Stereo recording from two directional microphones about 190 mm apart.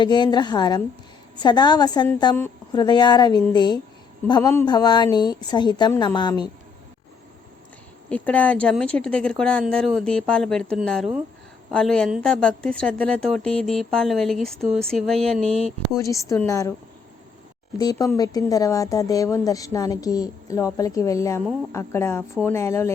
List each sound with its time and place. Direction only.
0.0 s a woman's voice: 25° left (ahead or behind)
8.1 s a woman's voice: 5° left (ahead or behind)
16.0 s a woman's voice: 15° left (ahead or behind)
17.7 s a woman's voice: 20° left (ahead or behind)